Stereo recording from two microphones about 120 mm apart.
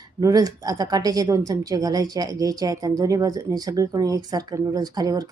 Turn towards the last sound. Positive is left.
turn(degrees=-30)  # may be behind; listen again after turning